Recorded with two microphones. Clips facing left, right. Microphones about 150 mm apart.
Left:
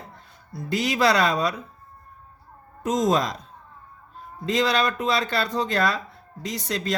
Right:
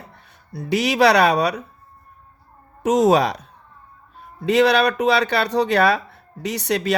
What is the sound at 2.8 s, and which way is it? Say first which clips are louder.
Speech: right 6 dB; 70° right (ahead or behind).